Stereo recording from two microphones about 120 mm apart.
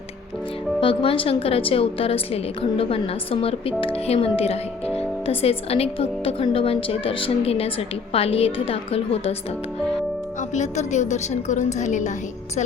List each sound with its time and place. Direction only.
0.8 s speech: 45° left (ahead or behind)
10.5 s a woman's voice: 80° left